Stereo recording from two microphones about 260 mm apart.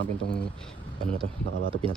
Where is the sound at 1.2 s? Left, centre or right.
Right.